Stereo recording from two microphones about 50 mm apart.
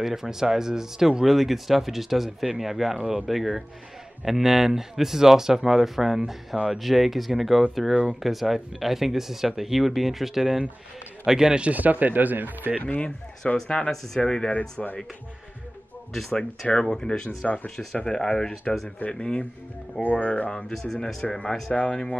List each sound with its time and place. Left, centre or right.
0.0 s speech: centre
7.9 s speech: right
8.2 s speech: centre
11.7 s speech: right
13.7 s speech: left
16.1 s speech: centre; by 20.6 s left
20.7 s speech: centre